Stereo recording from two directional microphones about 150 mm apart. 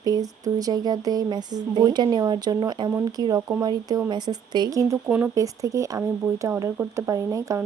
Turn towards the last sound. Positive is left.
turn(degrees=-25)  # may be behind; listen again after turning